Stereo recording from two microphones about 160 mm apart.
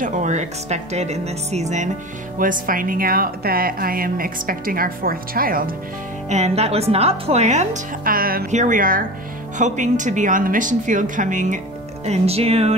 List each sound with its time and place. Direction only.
0.0 s speech: 45° right (ahead or behind)
2.3 s speech: 60° right (ahead or behind)
6.2 s speech: 45° right (ahead or behind)
8.0 s speech: 65° right (ahead or behind)
8.5 s speech: 50° right (ahead or behind)
12.1 s speech: 40° right (ahead or behind)